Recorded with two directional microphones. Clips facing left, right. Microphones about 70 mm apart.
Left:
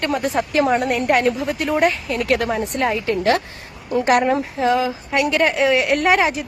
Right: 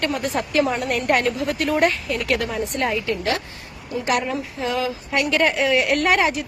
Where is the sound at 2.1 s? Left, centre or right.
Left.